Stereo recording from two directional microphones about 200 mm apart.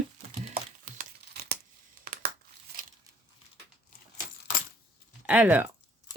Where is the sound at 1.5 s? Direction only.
55° right (ahead or behind).